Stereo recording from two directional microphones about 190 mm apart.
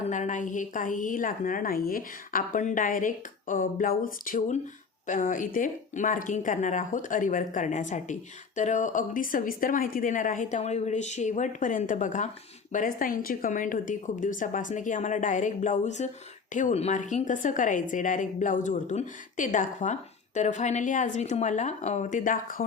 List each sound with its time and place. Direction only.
0.1 s a woman's voice: 40° left (ahead or behind)